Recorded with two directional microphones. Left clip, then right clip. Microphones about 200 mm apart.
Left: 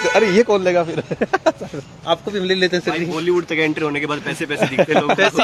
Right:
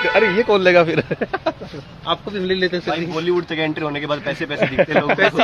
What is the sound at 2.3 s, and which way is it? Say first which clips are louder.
Speech: left 1 dB; 55° left (ahead or behind).